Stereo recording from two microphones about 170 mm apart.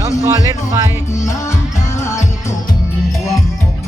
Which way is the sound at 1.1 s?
15° left (ahead or behind).